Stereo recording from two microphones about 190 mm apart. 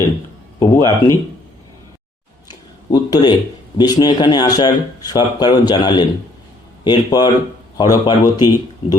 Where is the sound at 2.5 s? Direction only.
20° left (ahead or behind).